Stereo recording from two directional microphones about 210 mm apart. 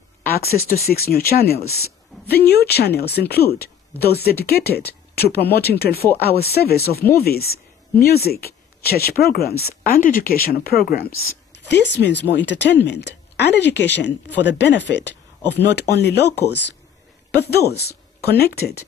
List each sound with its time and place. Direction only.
0.3 s speech: 45° left (ahead or behind)